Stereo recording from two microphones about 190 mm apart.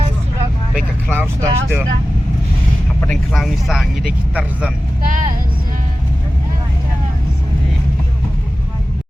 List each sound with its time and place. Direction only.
1.1 s speech: 10° right (ahead or behind)
3.0 s speech: 5° left (ahead or behind)
5.0 s speech: 45° right (ahead or behind)